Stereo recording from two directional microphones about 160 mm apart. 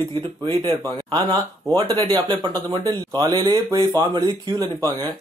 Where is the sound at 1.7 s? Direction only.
25° right (ahead or behind).